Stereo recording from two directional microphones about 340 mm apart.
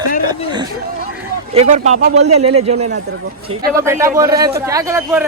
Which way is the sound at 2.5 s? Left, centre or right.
Right.